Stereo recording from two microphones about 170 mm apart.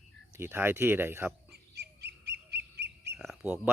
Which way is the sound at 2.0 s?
80° right.